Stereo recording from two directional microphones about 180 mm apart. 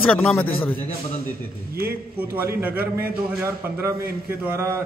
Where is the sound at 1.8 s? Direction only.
60° right (ahead or behind).